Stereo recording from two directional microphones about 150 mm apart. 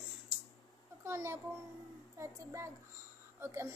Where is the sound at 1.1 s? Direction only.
20° right (ahead or behind).